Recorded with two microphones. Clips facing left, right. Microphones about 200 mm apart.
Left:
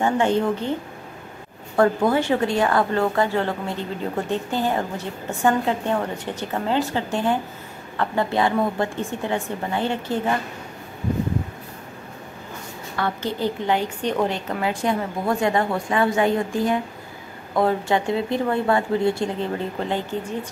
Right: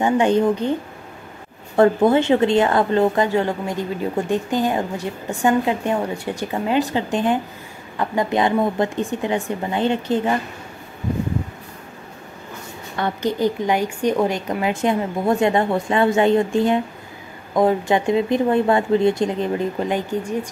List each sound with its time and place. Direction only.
0.0 s a woman's voice: 15° right (ahead or behind)
1.8 s a woman's voice: 25° right (ahead or behind)
12.9 s a woman's voice: 20° right (ahead or behind)